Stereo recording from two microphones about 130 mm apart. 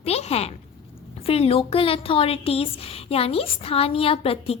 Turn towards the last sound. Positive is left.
turn(degrees=50)  # may be behind; listen again after turning